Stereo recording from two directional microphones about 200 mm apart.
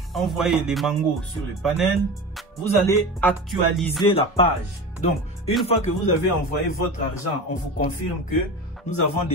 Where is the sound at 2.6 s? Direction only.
10° left (ahead or behind).